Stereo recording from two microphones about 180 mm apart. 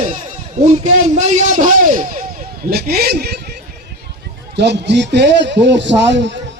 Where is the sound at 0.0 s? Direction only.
40° right (ahead or behind).